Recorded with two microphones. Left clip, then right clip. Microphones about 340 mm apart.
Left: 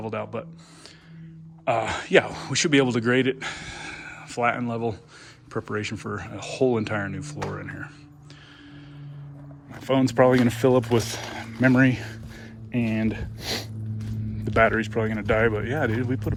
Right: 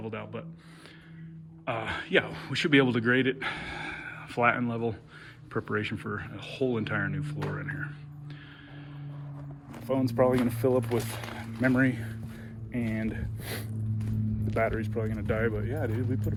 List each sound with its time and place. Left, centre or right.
0.0 s speech: centre
1.6 s speech: centre
9.8 s speech: left
15.9 s speech: left